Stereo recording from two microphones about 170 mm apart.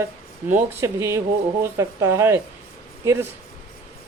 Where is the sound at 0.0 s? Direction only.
15° right (ahead or behind).